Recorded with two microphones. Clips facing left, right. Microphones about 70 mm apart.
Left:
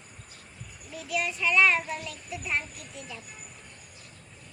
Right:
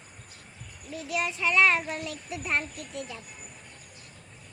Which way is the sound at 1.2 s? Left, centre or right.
Right.